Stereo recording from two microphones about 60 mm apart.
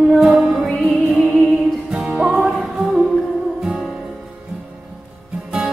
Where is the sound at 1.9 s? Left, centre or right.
Centre.